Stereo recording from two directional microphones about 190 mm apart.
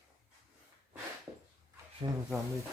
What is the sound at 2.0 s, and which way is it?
Speech, 20° right (ahead or behind).